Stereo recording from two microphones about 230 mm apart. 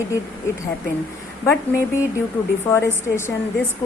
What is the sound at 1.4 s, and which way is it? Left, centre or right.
A woman's voice, centre.